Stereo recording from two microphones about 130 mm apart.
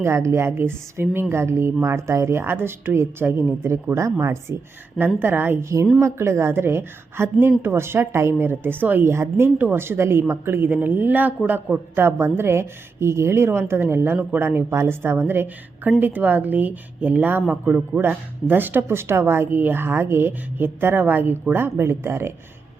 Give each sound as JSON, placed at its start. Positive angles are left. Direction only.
{"t": 0.0, "sound": "a woman's voice", "side_deg": -20}